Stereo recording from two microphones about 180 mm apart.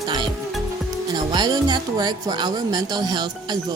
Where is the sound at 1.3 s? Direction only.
25° right (ahead or behind).